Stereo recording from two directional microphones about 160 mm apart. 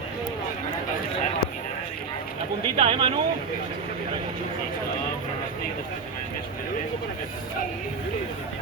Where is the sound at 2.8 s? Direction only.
35° right (ahead or behind).